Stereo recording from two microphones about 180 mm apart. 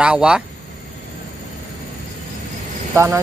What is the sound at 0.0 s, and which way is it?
Speech, 5° right (ahead or behind).